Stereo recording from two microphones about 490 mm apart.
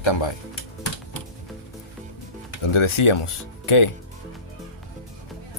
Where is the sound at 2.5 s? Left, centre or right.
Left.